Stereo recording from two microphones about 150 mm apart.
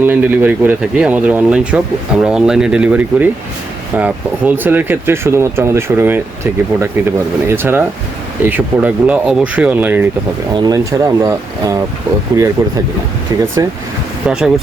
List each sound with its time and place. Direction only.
0.0 s speech: 10° right (ahead or behind)
10.5 s speech: 25° right (ahead or behind)
14.3 s speech: 5° right (ahead or behind)